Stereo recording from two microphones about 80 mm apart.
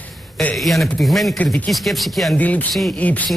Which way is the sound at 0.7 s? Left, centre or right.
Centre.